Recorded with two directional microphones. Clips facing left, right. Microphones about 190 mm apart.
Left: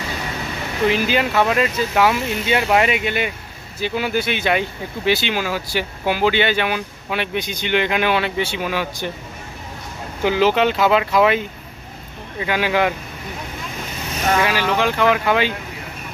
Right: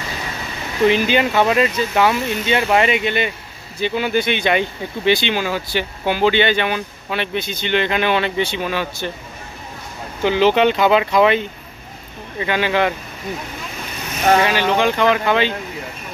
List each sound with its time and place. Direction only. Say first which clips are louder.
0.8 s speech: right 3 dB; 5° left (ahead or behind)
10.2 s speech: right 2 dB; 5° left (ahead or behind)
14.4 s speech: right 2 dB; 5° left (ahead or behind)